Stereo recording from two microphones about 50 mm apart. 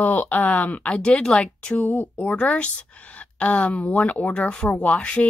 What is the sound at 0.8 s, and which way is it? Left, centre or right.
A woman's voice, left.